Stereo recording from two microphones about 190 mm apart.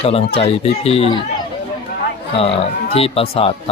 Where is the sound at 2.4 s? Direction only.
30° left (ahead or behind).